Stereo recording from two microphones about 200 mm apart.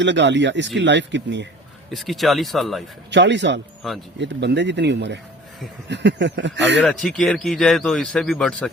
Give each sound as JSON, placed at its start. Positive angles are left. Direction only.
{"t": 0.0, "sound": "speech", "side_deg": -65}
{"t": 1.9, "sound": "a man's voice", "side_deg": 0}
{"t": 3.1, "sound": "speech", "side_deg": -60}
{"t": 3.8, "sound": "a man's voice", "side_deg": 0}
{"t": 4.2, "sound": "speech", "side_deg": -60}
{"t": 6.7, "sound": "a man's voice", "side_deg": 0}